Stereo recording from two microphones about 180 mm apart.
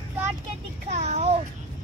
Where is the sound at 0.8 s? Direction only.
35° right (ahead or behind).